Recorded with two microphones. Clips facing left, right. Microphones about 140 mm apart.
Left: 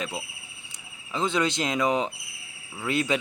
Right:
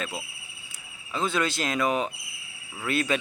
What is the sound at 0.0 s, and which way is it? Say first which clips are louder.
Speech: left 1 dB; 15° left (ahead or behind).